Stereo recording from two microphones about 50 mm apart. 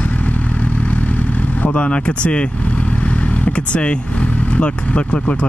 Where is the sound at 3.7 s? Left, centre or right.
Left.